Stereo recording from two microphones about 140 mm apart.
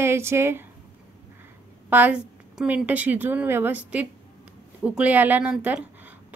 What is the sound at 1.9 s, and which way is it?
A woman's voice, 10° right (ahead or behind).